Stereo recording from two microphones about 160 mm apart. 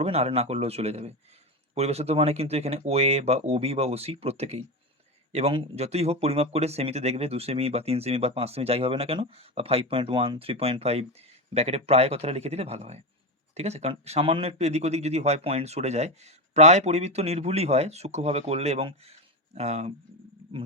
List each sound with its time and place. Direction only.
0.0 s speech: 40° right (ahead or behind)